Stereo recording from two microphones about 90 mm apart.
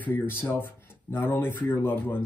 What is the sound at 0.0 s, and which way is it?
Speech, 20° left (ahead or behind).